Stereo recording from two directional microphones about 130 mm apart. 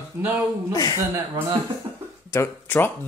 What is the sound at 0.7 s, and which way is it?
Speech, 30° left (ahead or behind).